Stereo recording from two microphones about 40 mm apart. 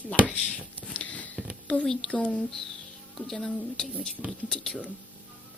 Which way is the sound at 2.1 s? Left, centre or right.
Left.